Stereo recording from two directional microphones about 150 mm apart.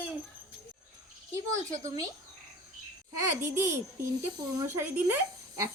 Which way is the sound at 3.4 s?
15° right (ahead or behind).